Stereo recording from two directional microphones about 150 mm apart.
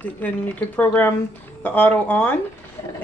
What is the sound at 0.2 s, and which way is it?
A woman's voice, 10° left (ahead or behind).